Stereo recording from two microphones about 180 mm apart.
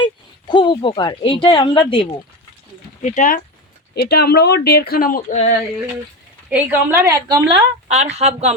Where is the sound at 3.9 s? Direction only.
60° left (ahead or behind).